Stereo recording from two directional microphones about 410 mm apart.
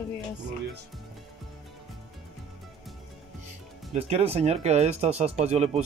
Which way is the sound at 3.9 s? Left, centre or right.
Centre.